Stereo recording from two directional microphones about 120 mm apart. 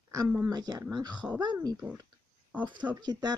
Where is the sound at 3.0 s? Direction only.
35° right (ahead or behind).